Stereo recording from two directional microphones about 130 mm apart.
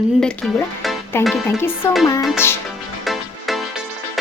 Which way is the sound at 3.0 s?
Centre (ahead or behind).